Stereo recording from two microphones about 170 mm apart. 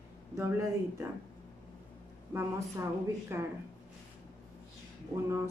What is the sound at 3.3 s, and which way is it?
Speech, 15° right (ahead or behind).